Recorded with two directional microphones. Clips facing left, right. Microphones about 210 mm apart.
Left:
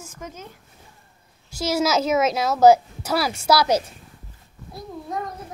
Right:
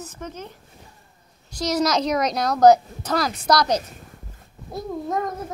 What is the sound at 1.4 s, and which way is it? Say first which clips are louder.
Speech: even; 5° left (ahead or behind).